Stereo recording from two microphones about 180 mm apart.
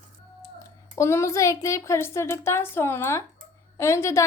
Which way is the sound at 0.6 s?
15° left (ahead or behind).